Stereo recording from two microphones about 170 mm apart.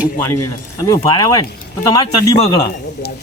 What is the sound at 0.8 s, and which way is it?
Speech, 20° left (ahead or behind).